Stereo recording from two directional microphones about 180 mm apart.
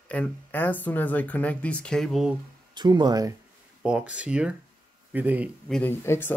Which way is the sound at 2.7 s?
25° right (ahead or behind).